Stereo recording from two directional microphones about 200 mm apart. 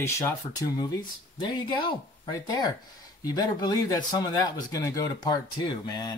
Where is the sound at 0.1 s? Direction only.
15° left (ahead or behind).